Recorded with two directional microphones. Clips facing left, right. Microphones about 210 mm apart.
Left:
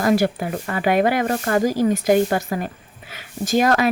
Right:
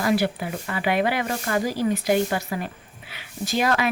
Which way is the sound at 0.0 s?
45° left (ahead or behind).